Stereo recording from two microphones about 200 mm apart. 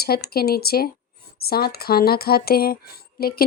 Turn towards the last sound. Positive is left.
turn(degrees=50)  # may be behind; listen again after turning